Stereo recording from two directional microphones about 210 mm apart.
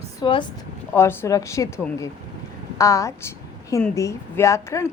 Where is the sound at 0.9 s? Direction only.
10° left (ahead or behind).